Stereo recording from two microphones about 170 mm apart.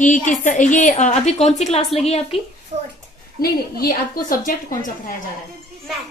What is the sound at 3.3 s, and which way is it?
A woman's voice, 60° left (ahead or behind).